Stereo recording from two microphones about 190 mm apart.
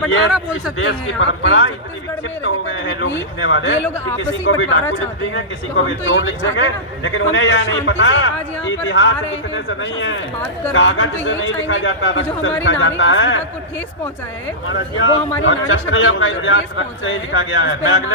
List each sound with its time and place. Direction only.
0.8 s speech: 65° left (ahead or behind)
2.4 s a man's voice: 90° left
3.8 s speech: 10° left (ahead or behind)
4.2 s a man's voice: 85° left
14.7 s a man's voice: 90° left